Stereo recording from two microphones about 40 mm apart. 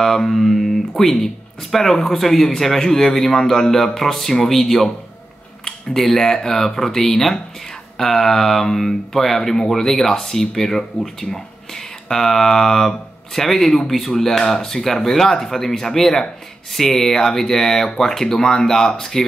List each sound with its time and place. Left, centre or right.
0.0 s speech: centre